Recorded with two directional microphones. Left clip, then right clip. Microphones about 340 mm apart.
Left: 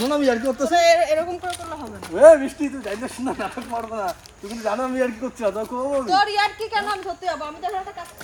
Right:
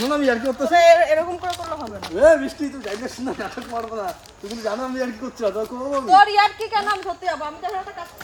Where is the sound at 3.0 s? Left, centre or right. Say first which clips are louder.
Left 1 dB; left.